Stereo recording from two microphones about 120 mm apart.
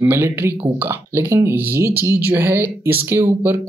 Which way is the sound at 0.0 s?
20° right (ahead or behind).